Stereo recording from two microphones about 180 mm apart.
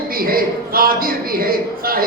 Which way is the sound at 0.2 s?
55° right (ahead or behind).